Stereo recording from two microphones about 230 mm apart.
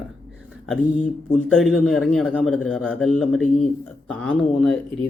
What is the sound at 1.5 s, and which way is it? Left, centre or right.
Speech, centre.